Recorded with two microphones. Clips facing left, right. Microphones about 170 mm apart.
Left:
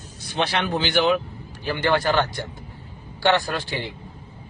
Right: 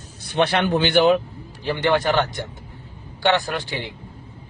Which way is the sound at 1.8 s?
20° right (ahead or behind).